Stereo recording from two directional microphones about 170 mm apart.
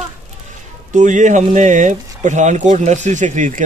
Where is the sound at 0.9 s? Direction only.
45° right (ahead or behind).